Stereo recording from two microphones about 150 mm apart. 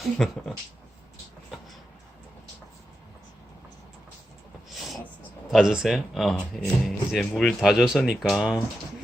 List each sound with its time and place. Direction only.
0.0 s speech: centre (ahead or behind)
5.5 s speech: centre (ahead or behind)